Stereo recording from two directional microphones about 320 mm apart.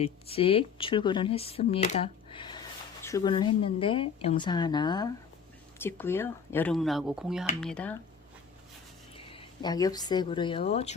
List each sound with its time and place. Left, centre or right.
0.0 s speech: centre
9.1 s speech: centre